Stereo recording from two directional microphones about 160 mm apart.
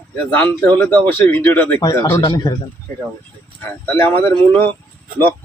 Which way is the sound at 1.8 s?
25° left (ahead or behind).